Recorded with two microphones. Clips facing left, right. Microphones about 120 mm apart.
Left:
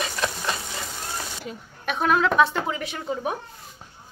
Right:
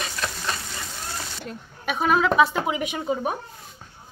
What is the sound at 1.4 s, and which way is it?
A woman's voice, centre (ahead or behind).